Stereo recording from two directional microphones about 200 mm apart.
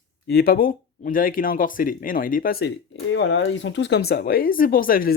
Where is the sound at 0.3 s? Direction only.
50° left (ahead or behind).